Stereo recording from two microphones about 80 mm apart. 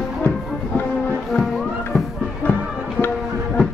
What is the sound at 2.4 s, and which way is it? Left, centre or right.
Music, left.